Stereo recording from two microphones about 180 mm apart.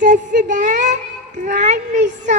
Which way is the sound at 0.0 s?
45° right (ahead or behind).